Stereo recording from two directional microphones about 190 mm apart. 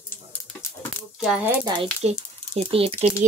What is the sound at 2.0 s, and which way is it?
Speech, 35° right (ahead or behind).